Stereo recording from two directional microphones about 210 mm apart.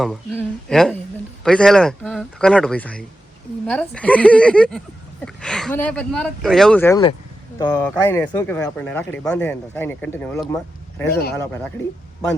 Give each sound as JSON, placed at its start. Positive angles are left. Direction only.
{"t": 0.0, "sound": "speech", "side_deg": 0}
{"t": 11.1, "sound": "speech", "side_deg": 50}